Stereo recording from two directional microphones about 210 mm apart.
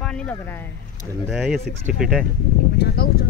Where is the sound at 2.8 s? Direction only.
50° left (ahead or behind).